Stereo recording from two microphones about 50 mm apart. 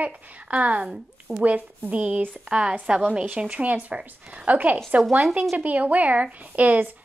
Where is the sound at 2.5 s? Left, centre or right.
Centre.